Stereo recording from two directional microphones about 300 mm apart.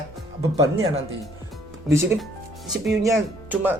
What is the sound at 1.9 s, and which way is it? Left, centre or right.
A man's voice, centre.